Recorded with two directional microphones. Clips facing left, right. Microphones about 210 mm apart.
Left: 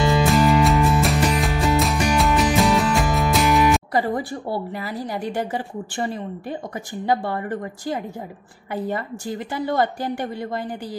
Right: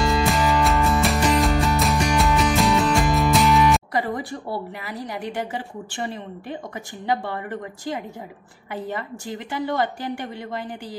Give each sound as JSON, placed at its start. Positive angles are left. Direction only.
{"t": 0.0, "sound": "music", "side_deg": 0}
{"t": 3.9, "sound": "a woman's voice", "side_deg": 30}
{"t": 7.1, "sound": "a woman's voice", "side_deg": 40}
{"t": 9.5, "sound": "a woman's voice", "side_deg": 40}